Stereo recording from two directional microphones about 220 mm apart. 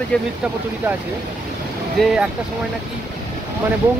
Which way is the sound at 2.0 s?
Centre (ahead or behind).